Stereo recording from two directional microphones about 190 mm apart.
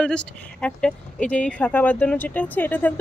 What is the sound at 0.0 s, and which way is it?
Speech, 5° left (ahead or behind).